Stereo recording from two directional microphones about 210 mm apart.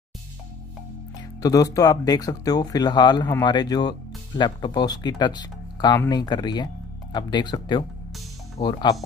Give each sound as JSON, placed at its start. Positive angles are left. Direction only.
{"t": 1.4, "sound": "speech", "side_deg": 15}